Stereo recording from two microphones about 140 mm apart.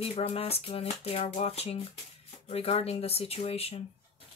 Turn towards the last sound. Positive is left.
turn(degrees=45)  # may be behind; listen again after turning